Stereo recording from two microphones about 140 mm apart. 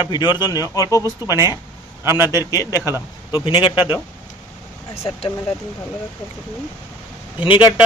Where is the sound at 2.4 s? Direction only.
25° left (ahead or behind).